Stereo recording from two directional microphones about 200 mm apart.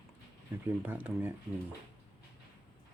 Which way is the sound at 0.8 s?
10° right (ahead or behind).